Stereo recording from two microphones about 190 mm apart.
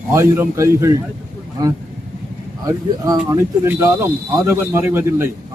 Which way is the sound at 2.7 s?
20° right (ahead or behind).